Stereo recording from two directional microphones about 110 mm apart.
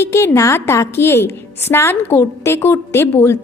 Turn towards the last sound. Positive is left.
turn(degrees=20)  # may be behind; listen again after turning